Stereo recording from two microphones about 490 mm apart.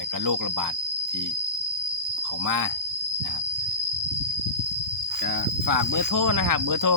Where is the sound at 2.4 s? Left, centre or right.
Right.